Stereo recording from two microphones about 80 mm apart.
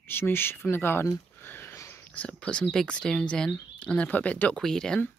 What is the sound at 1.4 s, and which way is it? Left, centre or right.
Sniff, left.